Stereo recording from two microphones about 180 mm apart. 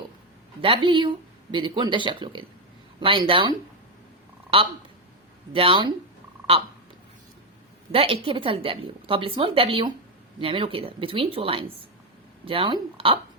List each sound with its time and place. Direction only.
0.6 s a woman's voice: 30° right (ahead or behind)
5.5 s a woman's voice: 30° right (ahead or behind)
7.9 s a woman's voice: 30° right (ahead or behind)